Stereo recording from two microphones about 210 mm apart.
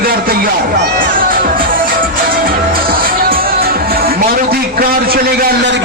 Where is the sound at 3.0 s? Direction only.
45° right (ahead or behind).